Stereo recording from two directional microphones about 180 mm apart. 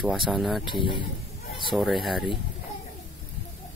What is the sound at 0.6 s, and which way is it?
Speech, 25° left (ahead or behind).